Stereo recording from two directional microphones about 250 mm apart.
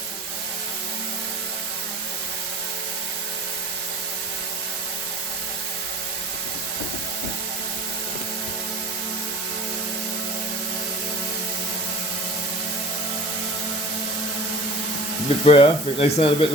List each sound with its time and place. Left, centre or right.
15.4 s speech: left